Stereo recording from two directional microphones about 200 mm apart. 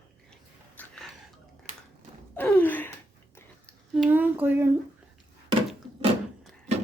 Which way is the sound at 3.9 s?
5° right (ahead or behind).